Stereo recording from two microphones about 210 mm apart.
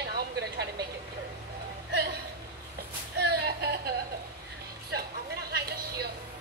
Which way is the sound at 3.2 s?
50° right (ahead or behind).